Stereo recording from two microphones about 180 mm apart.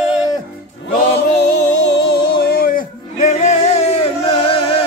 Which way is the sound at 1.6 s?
70° left (ahead or behind).